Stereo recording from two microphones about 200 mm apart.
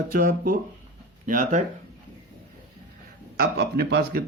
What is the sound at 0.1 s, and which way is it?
Speech, 45° right (ahead or behind).